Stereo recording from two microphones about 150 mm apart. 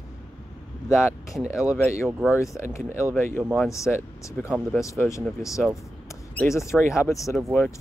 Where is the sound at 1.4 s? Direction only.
5° right (ahead or behind).